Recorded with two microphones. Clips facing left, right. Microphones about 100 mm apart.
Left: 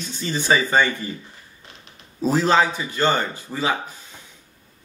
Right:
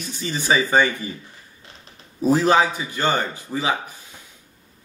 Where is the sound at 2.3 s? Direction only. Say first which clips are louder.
Right 1 dB; 15° right (ahead or behind).